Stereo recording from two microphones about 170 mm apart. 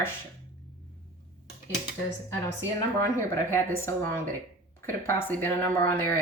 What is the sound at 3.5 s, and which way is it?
A woman's voice, 15° left (ahead or behind).